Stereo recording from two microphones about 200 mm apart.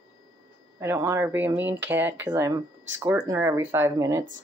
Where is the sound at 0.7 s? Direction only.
15° right (ahead or behind).